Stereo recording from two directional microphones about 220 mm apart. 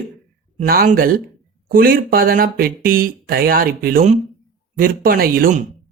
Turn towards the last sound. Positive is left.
turn(degrees=-40)  # may be behind; listen again after turning